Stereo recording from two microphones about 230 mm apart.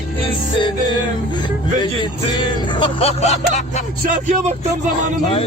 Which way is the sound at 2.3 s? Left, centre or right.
Centre.